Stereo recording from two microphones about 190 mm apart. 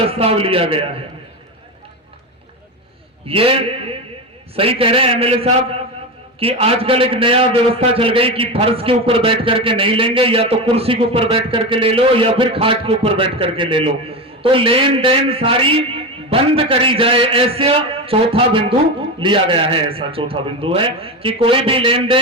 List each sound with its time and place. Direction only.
0.1 s a man's voice: 30° right (ahead or behind)
3.2 s a man's voice: 30° right (ahead or behind)